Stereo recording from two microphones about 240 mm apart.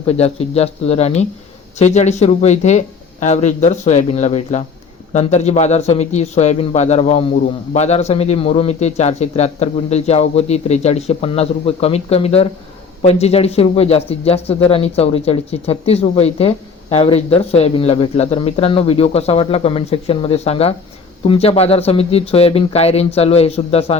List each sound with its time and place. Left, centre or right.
0.0 s speech: left